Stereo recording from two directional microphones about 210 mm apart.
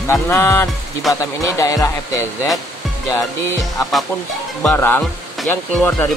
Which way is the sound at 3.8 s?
Centre (ahead or behind).